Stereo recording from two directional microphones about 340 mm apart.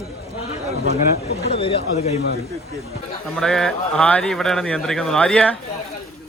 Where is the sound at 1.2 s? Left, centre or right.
Left.